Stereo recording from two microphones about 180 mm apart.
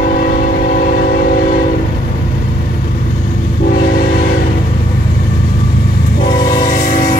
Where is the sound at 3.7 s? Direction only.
55° left (ahead or behind).